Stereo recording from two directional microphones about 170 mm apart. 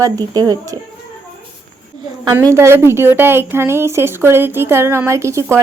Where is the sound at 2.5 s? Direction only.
15° right (ahead or behind).